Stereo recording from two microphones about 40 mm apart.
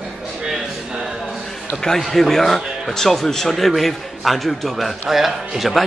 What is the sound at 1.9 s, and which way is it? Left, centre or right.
Speech, centre.